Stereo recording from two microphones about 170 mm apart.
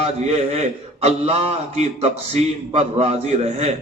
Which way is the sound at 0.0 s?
40° right (ahead or behind).